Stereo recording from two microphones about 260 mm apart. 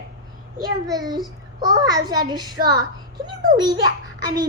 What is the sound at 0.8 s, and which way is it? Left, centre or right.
A child's voice, centre.